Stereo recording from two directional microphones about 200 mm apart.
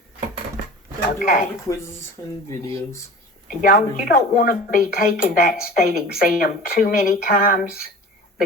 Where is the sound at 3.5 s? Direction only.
45° left (ahead or behind).